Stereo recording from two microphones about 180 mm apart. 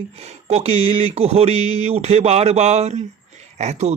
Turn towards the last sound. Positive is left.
turn(degrees=-40)  # may be behind; listen again after turning